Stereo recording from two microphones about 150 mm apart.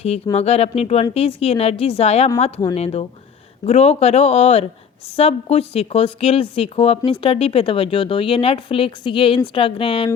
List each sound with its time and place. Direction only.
0.3 s a woman's voice: 45° left (ahead or behind)